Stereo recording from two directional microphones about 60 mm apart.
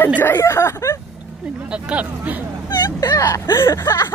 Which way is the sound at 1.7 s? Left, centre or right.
Right.